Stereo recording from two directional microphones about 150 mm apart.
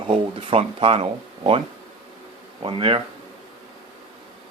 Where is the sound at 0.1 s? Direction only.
40° right (ahead or behind).